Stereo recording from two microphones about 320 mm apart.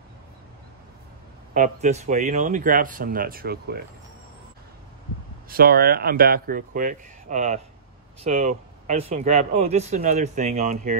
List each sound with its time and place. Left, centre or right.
1.5 s speech: right
5.5 s speech: right